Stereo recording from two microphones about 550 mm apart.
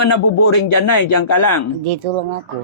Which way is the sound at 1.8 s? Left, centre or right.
Right.